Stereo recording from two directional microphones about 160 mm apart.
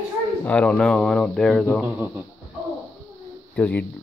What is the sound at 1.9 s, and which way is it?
Speech, 10° right (ahead or behind).